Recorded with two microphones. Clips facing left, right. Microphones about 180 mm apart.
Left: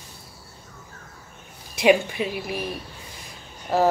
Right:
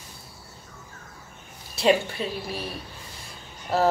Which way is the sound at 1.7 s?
15° left (ahead or behind).